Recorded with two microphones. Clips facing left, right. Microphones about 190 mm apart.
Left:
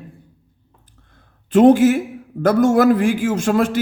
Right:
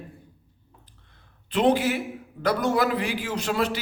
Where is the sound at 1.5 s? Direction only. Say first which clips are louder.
Left 10 dB; 45° left (ahead or behind).